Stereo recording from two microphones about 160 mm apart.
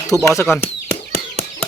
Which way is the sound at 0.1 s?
20° right (ahead or behind).